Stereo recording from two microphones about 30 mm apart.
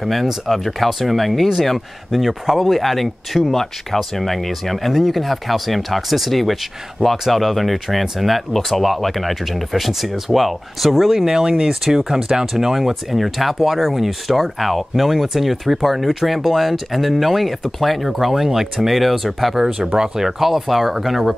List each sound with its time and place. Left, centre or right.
0.0 s speech: centre
11.3 s speech: right
11.8 s speech: centre